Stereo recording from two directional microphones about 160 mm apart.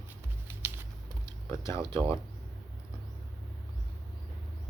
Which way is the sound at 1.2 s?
20° left (ahead or behind).